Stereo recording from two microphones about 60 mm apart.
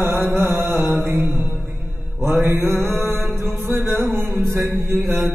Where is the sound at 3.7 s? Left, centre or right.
Right.